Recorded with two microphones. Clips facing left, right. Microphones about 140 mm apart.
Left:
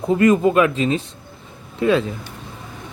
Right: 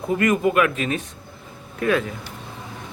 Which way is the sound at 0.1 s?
25° left (ahead or behind).